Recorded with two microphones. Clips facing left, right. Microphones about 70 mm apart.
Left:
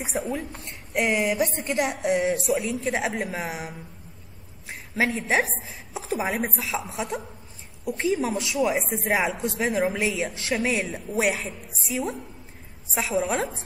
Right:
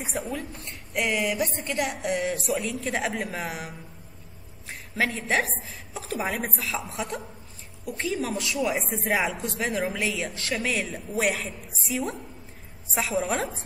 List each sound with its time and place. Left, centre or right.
0.0 s a woman's voice: centre
0.5 s speech: left
1.4 s a woman's voice: left
2.0 s a woman's voice: centre